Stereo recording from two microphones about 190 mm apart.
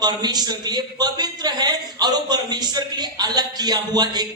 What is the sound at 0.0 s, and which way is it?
A man's voice, 20° right (ahead or behind).